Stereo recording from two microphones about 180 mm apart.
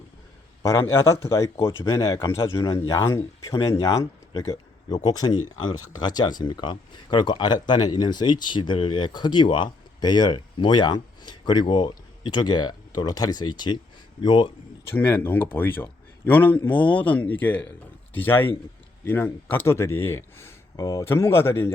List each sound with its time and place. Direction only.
0.6 s speech: 15° left (ahead or behind)
14.8 s speech: 10° left (ahead or behind)